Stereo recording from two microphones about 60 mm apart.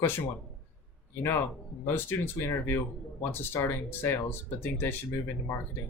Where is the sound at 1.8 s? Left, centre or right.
Left.